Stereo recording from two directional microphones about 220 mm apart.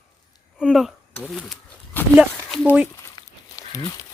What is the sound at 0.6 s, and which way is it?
Speech, centre (ahead or behind).